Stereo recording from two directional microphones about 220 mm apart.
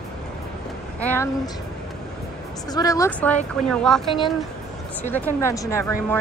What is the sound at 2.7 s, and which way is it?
Speech, 15° left (ahead or behind).